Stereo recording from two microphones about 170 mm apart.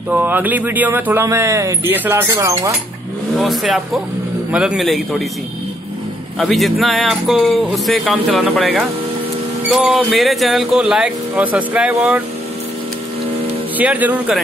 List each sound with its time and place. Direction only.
0.1 s speech: 10° right (ahead or behind)
3.3 s speech: centre (ahead or behind)
6.4 s speech: centre (ahead or behind)
13.7 s speech: 10° right (ahead or behind)